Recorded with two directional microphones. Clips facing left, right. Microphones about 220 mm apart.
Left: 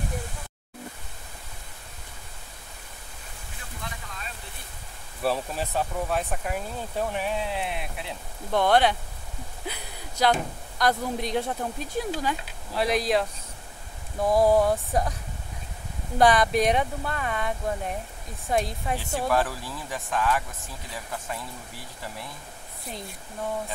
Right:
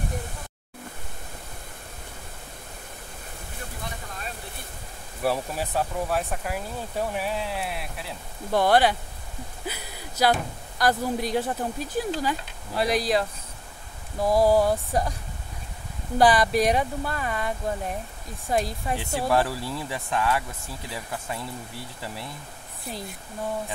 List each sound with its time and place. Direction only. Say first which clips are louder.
5.2 s speech: right 1 dB; 10° right (ahead or behind)
9.7 s a sound: right 1 dB; 5° right (ahead or behind)
10.8 s speech: right 2 dB; 5° right (ahead or behind)
16.2 s speech: right 1 dB; centre (ahead or behind)
19.2 s speech: right 2 dB; 25° right (ahead or behind)